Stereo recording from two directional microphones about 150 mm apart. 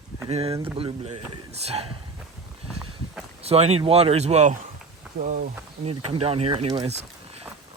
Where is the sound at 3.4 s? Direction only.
45° right (ahead or behind).